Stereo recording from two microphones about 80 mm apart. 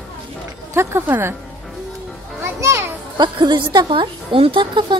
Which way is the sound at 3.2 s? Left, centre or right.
Right.